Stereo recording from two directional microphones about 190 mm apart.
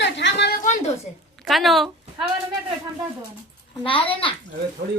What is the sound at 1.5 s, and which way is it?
Speech, centre (ahead or behind).